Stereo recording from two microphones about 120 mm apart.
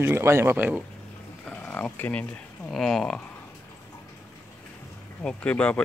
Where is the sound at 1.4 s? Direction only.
10° left (ahead or behind).